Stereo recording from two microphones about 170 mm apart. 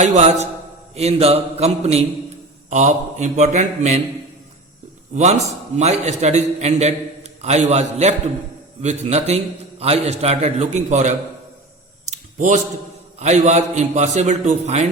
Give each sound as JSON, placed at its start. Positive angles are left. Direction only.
{"t": 0.0, "sound": "a man's voice", "side_deg": -40}
{"t": 5.1, "sound": "a man's voice", "side_deg": -40}
{"t": 12.1, "sound": "a sound", "side_deg": -50}
{"t": 13.1, "sound": "a man's voice", "side_deg": -40}